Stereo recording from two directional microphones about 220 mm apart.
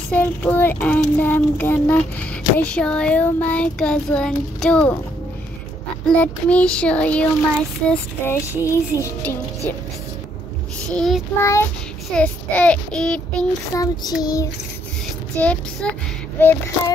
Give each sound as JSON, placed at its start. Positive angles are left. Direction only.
{"t": 0.1, "sound": "child singing", "side_deg": 5}
{"t": 6.0, "sound": "child singing", "side_deg": 5}
{"t": 10.9, "sound": "child singing", "side_deg": 0}
{"t": 11.4, "sound": "child singing", "side_deg": 10}
{"t": 13.7, "sound": "child singing", "side_deg": 15}